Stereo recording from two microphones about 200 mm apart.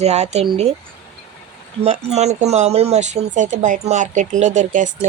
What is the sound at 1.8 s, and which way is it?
A woman's voice, 30° right (ahead or behind).